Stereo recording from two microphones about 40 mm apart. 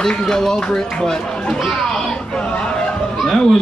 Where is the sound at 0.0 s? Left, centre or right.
Centre.